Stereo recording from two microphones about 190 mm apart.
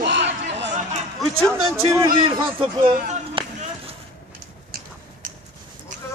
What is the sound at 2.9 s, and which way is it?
Speech, 50° right (ahead or behind).